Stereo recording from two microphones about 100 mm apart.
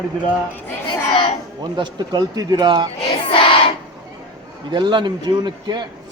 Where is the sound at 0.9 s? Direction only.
55° left (ahead or behind).